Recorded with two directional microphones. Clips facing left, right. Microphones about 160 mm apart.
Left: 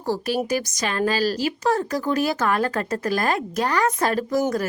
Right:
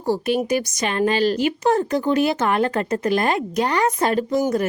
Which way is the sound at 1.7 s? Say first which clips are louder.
Right 4 dB; 25° right (ahead or behind).